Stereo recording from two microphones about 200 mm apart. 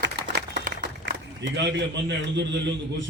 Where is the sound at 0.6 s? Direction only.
60° right (ahead or behind).